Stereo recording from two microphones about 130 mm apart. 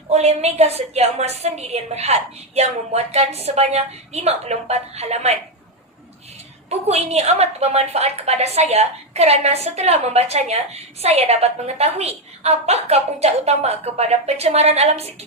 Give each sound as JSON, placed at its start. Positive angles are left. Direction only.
{"t": 0.1, "sound": "a woman's voice", "side_deg": -55}
{"t": 6.7, "sound": "a woman's voice", "side_deg": -55}